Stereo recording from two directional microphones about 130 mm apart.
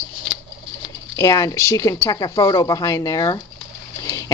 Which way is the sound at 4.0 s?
25° left (ahead or behind).